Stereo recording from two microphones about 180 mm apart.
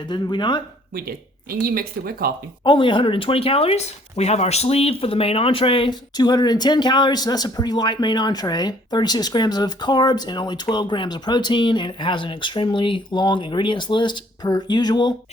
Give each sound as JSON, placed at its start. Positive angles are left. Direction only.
{"t": 0.1, "sound": "speech", "side_deg": 25}
{"t": 0.9, "sound": "speech", "side_deg": -55}
{"t": 2.6, "sound": "speech", "side_deg": 25}